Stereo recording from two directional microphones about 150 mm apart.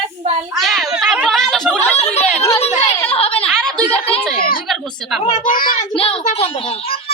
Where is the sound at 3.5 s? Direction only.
5° left (ahead or behind).